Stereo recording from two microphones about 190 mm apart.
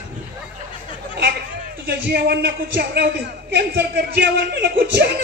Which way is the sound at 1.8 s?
60° right (ahead or behind).